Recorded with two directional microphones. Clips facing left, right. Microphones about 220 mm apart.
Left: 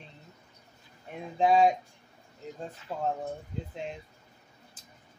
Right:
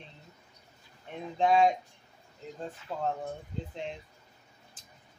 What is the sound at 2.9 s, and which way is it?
Speech, 10° left (ahead or behind).